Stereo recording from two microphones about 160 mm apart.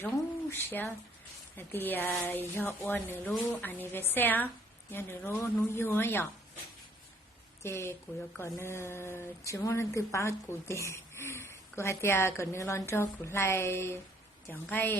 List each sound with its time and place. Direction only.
0.5 s speech: 10° left (ahead or behind)
7.6 s speech: 15° left (ahead or behind)